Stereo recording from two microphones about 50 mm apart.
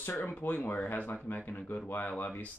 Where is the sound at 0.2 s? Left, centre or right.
Left.